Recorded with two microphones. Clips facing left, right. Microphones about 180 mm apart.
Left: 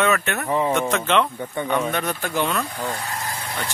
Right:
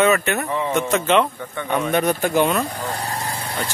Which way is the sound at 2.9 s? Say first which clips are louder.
Right 3 dB; 35° right (ahead or behind).